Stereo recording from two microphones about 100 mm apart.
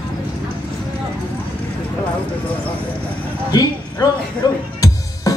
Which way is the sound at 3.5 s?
45° left (ahead or behind).